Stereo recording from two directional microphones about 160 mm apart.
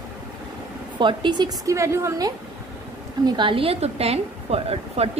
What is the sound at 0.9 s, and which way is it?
A woman's voice, 30° right (ahead or behind).